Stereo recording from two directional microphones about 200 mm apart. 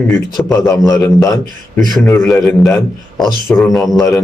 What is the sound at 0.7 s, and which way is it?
Speech, 15° left (ahead or behind).